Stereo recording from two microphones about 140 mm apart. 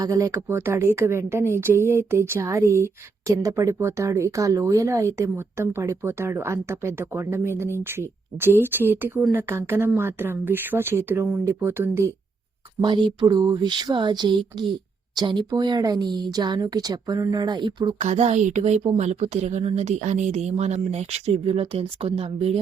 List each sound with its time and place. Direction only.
0.0 s a woman's voice: 20° right (ahead or behind)
12.8 s speech: 35° right (ahead or behind)
18.0 s a woman's voice: 50° right (ahead or behind)